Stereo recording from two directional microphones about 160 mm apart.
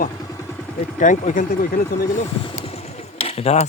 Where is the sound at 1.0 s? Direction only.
55° left (ahead or behind).